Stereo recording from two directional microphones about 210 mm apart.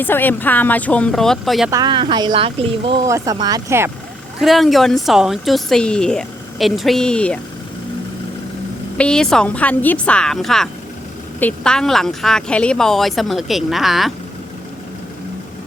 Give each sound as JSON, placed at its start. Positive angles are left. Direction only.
{"t": 0.0, "sound": "speech", "side_deg": 10}
{"t": 1.7, "sound": "speech", "side_deg": -20}
{"t": 4.4, "sound": "speech", "side_deg": 0}
{"t": 9.0, "sound": "speech", "side_deg": 5}